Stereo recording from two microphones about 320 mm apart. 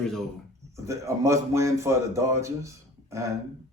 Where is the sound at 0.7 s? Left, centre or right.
Centre.